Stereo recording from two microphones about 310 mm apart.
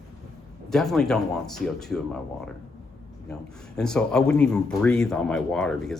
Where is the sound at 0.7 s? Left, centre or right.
Centre.